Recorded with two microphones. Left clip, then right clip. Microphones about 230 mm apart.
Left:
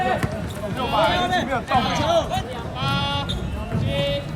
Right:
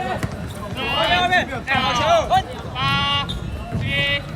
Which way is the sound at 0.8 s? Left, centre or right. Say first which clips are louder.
Right 2 dB; centre.